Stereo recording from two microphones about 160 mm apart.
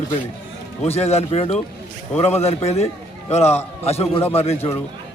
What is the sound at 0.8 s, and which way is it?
Speech, 40° left (ahead or behind).